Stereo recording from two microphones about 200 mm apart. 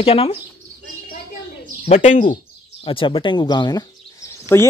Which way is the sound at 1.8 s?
35° left (ahead or behind).